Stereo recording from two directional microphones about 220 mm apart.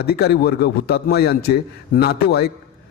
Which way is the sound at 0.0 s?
45° left (ahead or behind).